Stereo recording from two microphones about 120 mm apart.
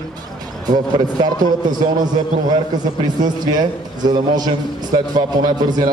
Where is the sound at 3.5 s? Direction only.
35° right (ahead or behind).